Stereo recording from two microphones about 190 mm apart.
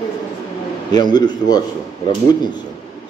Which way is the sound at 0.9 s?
20° left (ahead or behind).